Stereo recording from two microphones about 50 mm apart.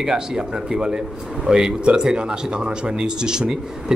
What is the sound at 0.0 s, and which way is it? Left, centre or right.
A man's voice, centre.